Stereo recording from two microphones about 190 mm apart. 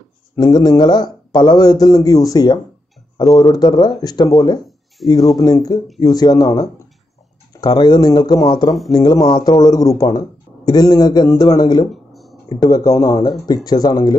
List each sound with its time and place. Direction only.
0.4 s a man's voice: 20° left (ahead or behind)
11.9 s a sound: centre (ahead or behind)
12.4 s a man's voice: 20° left (ahead or behind)